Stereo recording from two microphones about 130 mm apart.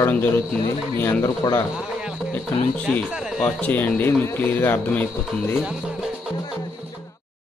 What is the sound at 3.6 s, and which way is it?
Speech, 15° left (ahead or behind).